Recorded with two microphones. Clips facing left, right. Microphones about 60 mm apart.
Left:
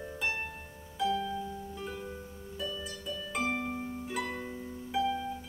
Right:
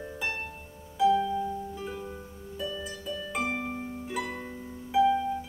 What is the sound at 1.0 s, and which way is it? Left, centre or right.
Harp, centre.